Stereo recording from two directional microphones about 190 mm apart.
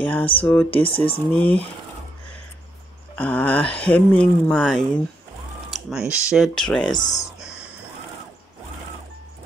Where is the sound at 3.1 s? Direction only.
10° left (ahead or behind).